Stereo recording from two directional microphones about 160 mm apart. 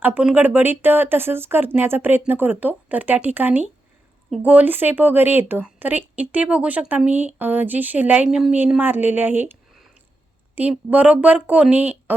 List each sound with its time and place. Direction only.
0.0 s speech: 10° right (ahead or behind)
10.5 s speech: 10° right (ahead or behind)